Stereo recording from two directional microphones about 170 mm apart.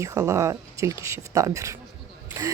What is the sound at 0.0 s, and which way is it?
A woman's voice, 15° right (ahead or behind).